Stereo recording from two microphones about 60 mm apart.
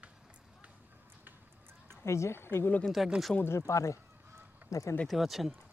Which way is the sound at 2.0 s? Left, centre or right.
Left.